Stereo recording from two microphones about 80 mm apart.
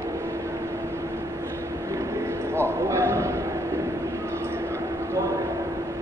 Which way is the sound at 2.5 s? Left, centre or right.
Right.